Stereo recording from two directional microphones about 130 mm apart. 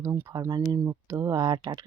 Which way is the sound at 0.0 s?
20° right (ahead or behind).